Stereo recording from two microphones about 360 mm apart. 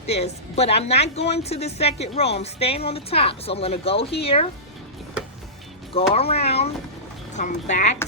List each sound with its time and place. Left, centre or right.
0.1 s a woman's voice: centre
5.9 s a woman's voice: centre